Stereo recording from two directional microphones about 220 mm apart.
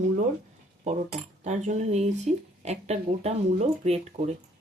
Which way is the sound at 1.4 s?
30° right (ahead or behind).